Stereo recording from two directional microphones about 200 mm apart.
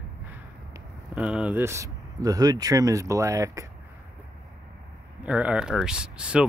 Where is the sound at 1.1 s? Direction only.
5° right (ahead or behind).